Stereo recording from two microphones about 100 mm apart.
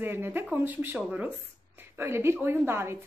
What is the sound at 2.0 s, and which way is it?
A woman's voice, 25° right (ahead or behind).